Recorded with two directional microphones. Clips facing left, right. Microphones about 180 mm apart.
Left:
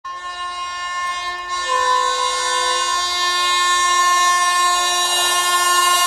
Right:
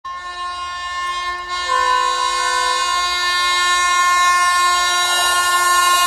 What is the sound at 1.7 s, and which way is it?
Train, 20° left (ahead or behind).